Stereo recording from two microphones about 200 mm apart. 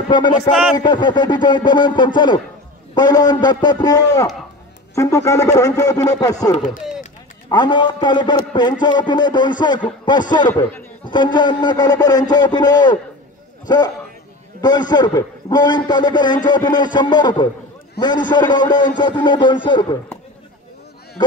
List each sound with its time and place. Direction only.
0.1 s a man's voice: 20° left (ahead or behind)
0.5 s a man's voice: centre (ahead or behind)
0.7 s a man's voice: 20° left (ahead or behind)
6.5 s speech: 40° left (ahead or behind)
7.4 s a man's voice: 20° left (ahead or behind)
10.5 s speech: 10° left (ahead or behind)
11.3 s a man's voice: 20° left (ahead or behind)